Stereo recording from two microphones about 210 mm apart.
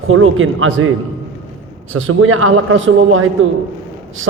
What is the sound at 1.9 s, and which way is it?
A man's voice, 70° right (ahead or behind).